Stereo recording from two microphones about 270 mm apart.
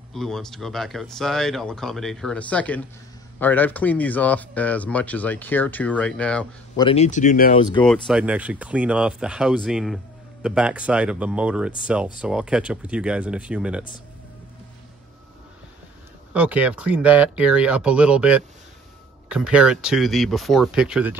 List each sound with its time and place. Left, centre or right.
0.1 s speech: centre
6.8 s speech: left
7.5 s speech: centre
7.8 s speech: centre
16.3 s speech: centre